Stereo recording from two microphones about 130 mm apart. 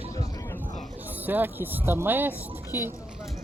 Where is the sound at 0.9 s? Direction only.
15° right (ahead or behind).